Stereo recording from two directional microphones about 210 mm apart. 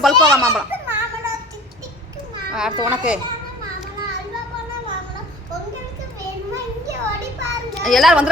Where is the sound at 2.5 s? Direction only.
5° right (ahead or behind).